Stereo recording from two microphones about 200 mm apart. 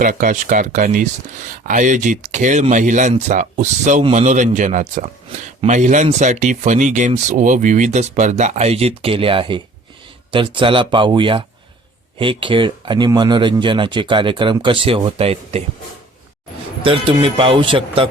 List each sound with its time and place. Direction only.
0.0 s speech: 40° right (ahead or behind)
16.8 s speech: 25° right (ahead or behind)